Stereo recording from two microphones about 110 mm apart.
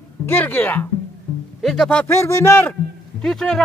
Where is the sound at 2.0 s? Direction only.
25° left (ahead or behind).